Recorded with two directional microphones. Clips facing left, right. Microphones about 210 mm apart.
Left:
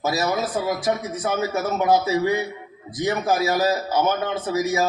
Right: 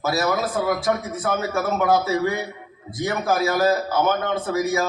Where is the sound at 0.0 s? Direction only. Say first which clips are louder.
Right 1 dB; 20° left (ahead or behind).